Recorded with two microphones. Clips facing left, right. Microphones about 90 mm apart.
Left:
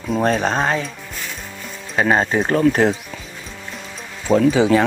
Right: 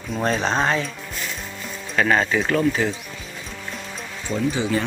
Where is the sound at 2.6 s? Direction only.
60° left (ahead or behind).